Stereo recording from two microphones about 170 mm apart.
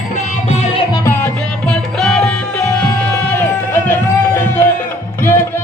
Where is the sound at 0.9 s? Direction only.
15° left (ahead or behind).